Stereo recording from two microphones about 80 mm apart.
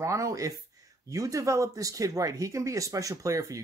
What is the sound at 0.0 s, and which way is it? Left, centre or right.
Speech, right.